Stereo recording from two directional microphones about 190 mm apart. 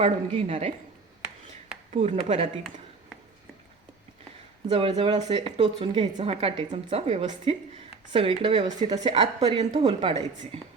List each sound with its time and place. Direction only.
0.0 s speech: 35° right (ahead or behind)
1.9 s speech: 35° right (ahead or behind)
4.7 s a woman's voice: 30° right (ahead or behind)